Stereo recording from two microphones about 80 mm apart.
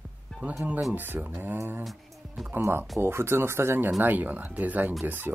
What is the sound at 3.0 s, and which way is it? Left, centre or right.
Speech, right.